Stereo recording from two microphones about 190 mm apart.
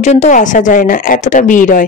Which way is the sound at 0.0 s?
35° left (ahead or behind).